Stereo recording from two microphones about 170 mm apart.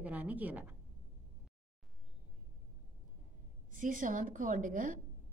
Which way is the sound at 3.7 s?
50° right (ahead or behind).